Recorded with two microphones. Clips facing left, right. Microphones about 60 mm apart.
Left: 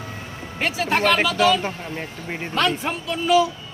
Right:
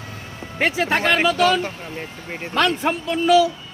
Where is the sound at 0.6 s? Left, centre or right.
Right.